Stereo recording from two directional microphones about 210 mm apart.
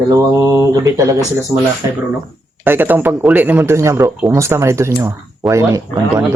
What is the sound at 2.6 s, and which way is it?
Speech, 10° right (ahead or behind).